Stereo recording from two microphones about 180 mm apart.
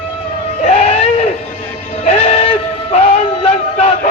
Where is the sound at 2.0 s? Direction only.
35° left (ahead or behind).